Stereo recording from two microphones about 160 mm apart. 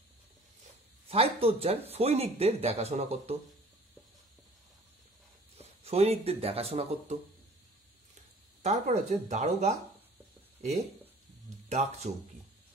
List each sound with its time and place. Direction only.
1.0 s speech: 35° right (ahead or behind)
5.6 s speech: 40° right (ahead or behind)
8.6 s speech: 45° right (ahead or behind)
11.7 s speech: 45° right (ahead or behind)